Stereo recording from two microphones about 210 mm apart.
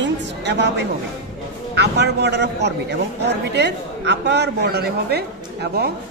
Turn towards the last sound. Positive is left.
turn(degrees=-50)  # may be behind; listen again after turning